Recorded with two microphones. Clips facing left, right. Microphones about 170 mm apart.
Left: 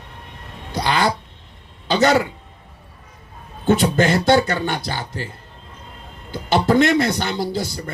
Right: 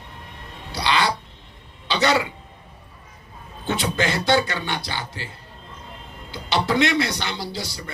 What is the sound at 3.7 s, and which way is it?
A man's voice, 45° left (ahead or behind).